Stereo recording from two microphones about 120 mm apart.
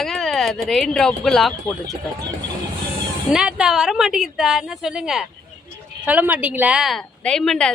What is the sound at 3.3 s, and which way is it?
Speech, 5° right (ahead or behind).